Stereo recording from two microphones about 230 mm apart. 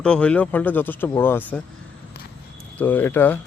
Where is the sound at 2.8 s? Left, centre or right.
Centre.